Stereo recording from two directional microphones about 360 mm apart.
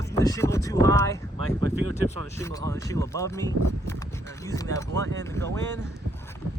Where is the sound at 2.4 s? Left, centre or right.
Centre.